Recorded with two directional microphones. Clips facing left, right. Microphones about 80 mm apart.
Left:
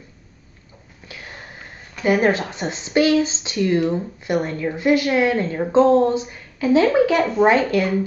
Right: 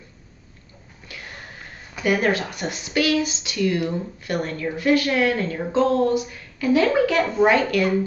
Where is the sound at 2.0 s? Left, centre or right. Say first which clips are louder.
Left 3 dB; left.